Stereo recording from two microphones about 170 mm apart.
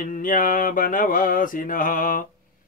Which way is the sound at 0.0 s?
55° left (ahead or behind).